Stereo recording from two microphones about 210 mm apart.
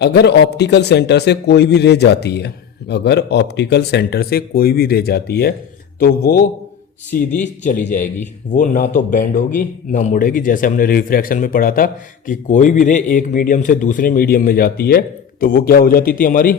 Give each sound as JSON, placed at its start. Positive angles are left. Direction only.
{"t": 0.0, "sound": "a man's voice", "side_deg": 50}
{"t": 7.3, "sound": "a man's voice", "side_deg": 35}